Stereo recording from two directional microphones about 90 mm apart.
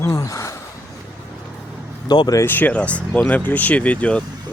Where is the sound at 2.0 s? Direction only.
50° left (ahead or behind).